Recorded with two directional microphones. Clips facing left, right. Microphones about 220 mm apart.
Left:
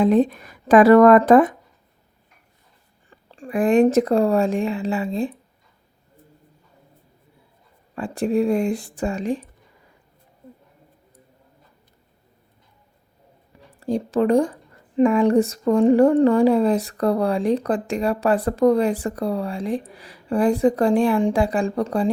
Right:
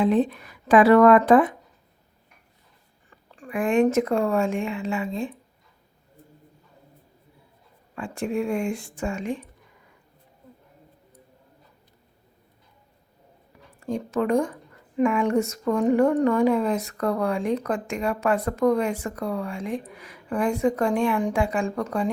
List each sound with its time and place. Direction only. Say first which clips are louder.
0.0 s speech: left 4 dB; 45° left (ahead or behind)
3.1 s a woman's voice: left 5 dB; 30° left (ahead or behind)
7.9 s speech: left 6 dB; 35° left (ahead or behind)
13.7 s speech: left 5 dB; 35° left (ahead or behind)